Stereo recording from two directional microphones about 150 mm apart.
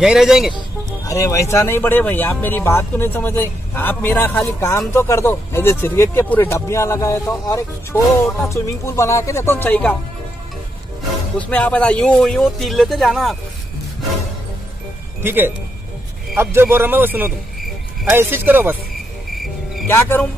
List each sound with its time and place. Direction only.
0.0 s speech: 5° right (ahead or behind)
0.6 s speech: 20° left (ahead or behind)
11.3 s speech: 10° left (ahead or behind)
15.2 s a man's voice: 15° right (ahead or behind)
19.3 s cricket: centre (ahead or behind)
19.9 s speech: 15° left (ahead or behind)